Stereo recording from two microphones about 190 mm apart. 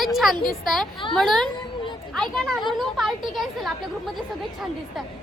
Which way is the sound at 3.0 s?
Centre (ahead or behind).